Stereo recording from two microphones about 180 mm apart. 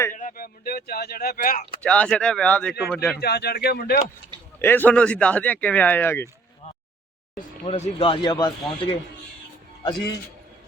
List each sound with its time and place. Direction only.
0.2 s a sound: 50° left (ahead or behind)
1.8 s speech: 5° left (ahead or behind)
3.2 s speech: 60° left (ahead or behind)
4.6 s speech: 10° left (ahead or behind)
7.7 s speech: 35° left (ahead or behind)